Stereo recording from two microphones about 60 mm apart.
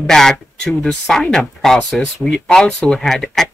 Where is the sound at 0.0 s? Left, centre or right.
Centre.